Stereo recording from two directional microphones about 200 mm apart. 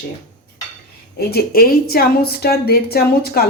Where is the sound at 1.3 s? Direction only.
50° left (ahead or behind).